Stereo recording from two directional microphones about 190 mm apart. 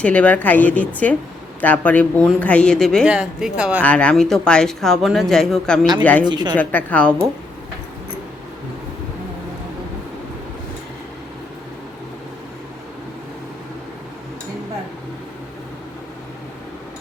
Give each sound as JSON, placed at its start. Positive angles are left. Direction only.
{"t": 0.0, "sound": "a woman's voice", "side_deg": 5}
{"t": 3.8, "sound": "a woman's voice", "side_deg": 5}
{"t": 6.2, "sound": "speech", "side_deg": -25}
{"t": 6.5, "sound": "a woman's voice", "side_deg": 10}